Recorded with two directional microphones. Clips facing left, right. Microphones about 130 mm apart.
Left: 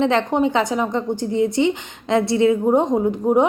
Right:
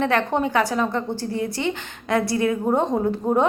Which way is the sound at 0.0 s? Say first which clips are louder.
Left 3 dB; 20° left (ahead or behind).